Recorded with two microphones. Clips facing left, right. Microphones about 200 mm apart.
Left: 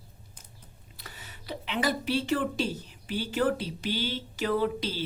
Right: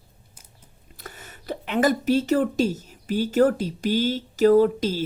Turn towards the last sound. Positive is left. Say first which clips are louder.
# right 10 dB
turn(degrees=-45)  # may be behind; listen again after turning